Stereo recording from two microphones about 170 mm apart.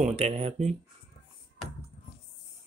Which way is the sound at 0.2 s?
40° right (ahead or behind).